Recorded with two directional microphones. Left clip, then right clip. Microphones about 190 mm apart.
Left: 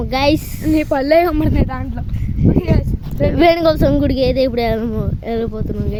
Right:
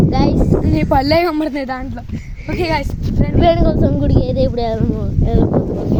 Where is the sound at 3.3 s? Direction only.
25° left (ahead or behind).